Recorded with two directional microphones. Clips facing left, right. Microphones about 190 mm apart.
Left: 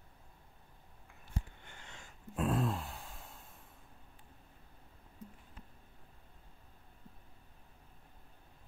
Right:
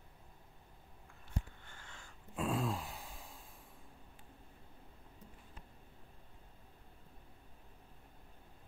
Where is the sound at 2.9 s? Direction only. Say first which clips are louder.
Left 1 dB; 15° right (ahead or behind).